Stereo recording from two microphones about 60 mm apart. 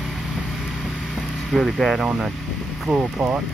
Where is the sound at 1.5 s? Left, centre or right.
Centre.